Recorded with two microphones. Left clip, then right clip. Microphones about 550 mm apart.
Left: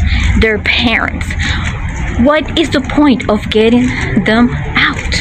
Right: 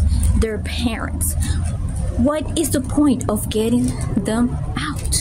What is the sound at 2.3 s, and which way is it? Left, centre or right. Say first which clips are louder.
Speech: left 10 dB; right.